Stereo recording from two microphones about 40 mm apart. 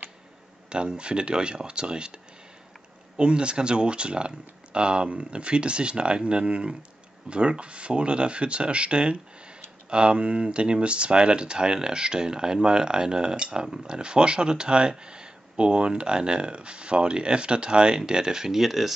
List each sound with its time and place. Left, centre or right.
0.7 s speech: right
3.2 s speech: right; by 18.9 s centre